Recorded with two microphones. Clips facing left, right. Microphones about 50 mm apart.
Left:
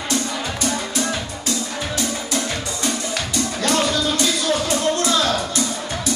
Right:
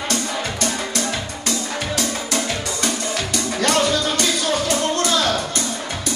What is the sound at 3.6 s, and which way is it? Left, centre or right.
Music, right.